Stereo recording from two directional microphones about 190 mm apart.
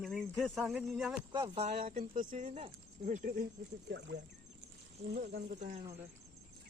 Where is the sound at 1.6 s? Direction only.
40° right (ahead or behind).